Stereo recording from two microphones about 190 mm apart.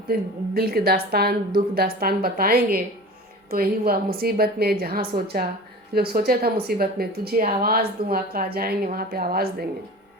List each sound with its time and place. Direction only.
0.1 s speech: 50° right (ahead or behind)